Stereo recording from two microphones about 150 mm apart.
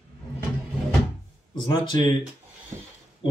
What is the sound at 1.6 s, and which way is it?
Speech, 30° left (ahead or behind).